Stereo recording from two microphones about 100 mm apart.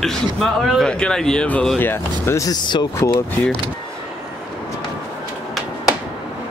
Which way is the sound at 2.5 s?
50° left (ahead or behind).